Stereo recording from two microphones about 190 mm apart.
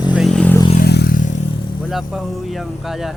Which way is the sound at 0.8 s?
55° left (ahead or behind).